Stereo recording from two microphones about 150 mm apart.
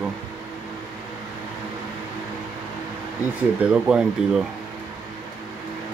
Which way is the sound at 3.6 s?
5° right (ahead or behind).